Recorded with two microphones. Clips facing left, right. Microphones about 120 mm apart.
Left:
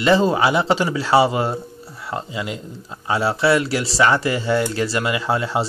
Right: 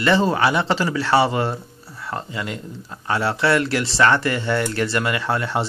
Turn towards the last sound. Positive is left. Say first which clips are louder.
# left 2 dB
turn(degrees=10)  # may be behind; listen again after turning